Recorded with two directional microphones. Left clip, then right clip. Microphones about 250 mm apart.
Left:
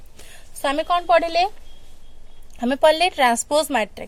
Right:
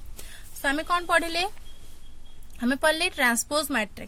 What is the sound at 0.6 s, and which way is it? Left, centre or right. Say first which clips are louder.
Speech: left 6 dB; centre.